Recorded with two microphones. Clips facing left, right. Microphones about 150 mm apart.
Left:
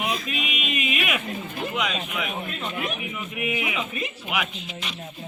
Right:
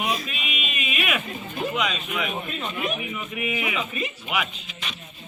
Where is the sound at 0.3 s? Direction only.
80° left.